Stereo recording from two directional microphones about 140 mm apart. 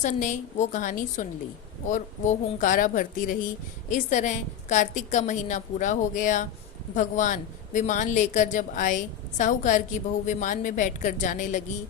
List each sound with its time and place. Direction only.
0.0 s a woman's voice: 60° left (ahead or behind)